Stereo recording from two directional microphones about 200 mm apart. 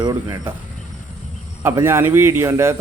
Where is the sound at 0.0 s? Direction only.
20° right (ahead or behind).